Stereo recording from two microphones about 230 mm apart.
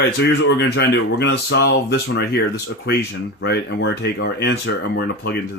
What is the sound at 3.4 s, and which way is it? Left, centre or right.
Speech, left.